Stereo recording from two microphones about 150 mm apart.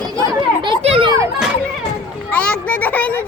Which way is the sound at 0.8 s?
45° right (ahead or behind).